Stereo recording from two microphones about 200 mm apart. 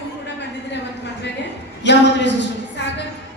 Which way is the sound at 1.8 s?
60° left (ahead or behind).